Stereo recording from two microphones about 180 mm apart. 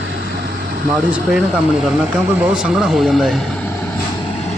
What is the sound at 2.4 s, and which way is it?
Speech, 5° right (ahead or behind).